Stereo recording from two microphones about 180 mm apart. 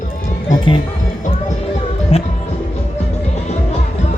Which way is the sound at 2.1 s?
35° left (ahead or behind).